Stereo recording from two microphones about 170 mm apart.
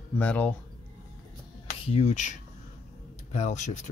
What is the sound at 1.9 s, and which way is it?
Speech, 40° left (ahead or behind).